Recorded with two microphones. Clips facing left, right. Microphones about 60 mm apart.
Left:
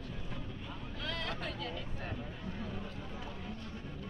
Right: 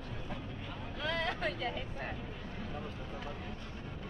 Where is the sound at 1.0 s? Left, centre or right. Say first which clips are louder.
Right 5 dB; centre.